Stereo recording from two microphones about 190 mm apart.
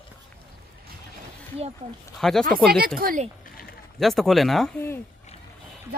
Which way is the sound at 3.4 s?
50° left (ahead or behind).